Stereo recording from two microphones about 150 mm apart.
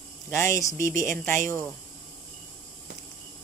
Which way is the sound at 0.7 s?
60° right (ahead or behind).